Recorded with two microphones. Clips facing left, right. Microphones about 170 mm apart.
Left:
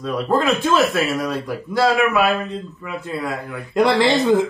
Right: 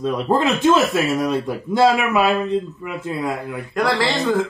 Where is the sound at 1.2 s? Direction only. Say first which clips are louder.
Right 3 dB; 20° right (ahead or behind).